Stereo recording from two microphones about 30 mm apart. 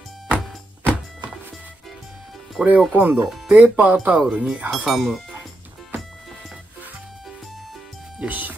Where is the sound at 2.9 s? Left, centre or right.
Right.